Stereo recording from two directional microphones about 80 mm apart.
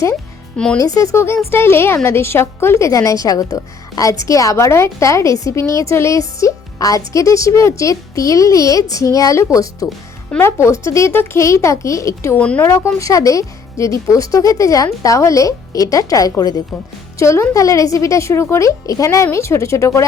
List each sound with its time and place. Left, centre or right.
0.5 s speech: centre
0.8 s a woman's voice: left
12.4 s a woman's voice: centre
12.6 s a woman's voice: left